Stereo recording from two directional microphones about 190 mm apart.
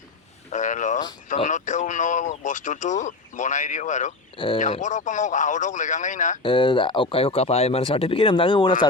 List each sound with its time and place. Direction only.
0.5 s speech: 40° left (ahead or behind)
6.4 s speech: 25° left (ahead or behind)